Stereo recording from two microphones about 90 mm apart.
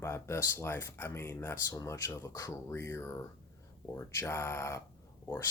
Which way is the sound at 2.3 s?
45° left (ahead or behind).